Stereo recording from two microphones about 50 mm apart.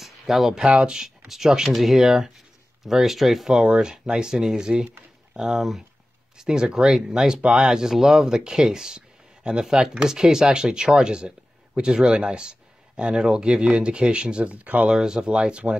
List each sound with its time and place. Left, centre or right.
0.0 s a sound: centre
0.7 s speech: centre
3.6 s speech: right
14.9 s speech: centre